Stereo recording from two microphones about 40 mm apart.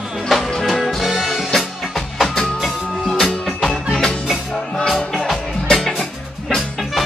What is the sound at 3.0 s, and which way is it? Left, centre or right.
Music, centre.